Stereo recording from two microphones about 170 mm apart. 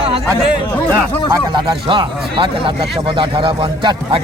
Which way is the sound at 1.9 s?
30° right (ahead or behind).